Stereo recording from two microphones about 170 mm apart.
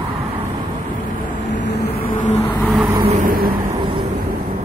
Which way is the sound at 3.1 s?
55° right (ahead or behind).